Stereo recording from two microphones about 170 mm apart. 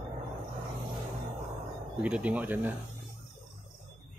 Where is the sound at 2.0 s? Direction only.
10° right (ahead or behind).